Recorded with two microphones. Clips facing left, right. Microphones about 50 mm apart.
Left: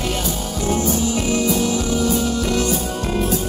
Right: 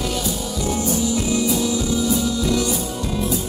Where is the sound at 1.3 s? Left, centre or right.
Left.